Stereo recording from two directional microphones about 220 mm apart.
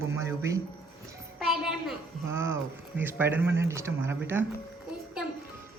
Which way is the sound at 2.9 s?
10° right (ahead or behind).